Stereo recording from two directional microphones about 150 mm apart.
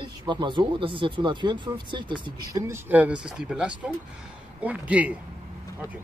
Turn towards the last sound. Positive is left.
turn(degrees=-10)  # may be behind; listen again after turning